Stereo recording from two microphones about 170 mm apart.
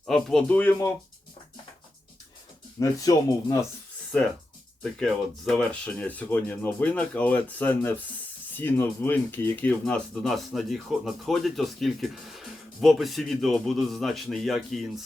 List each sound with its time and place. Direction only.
0.0 s speech: centre (ahead or behind)
2.7 s speech: 20° left (ahead or behind)
4.8 s speech: 5° left (ahead or behind)